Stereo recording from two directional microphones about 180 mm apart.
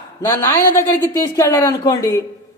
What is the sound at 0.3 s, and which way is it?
A man's voice, 15° left (ahead or behind).